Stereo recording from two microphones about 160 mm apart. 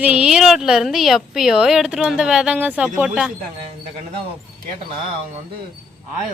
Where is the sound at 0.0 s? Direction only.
5° right (ahead or behind).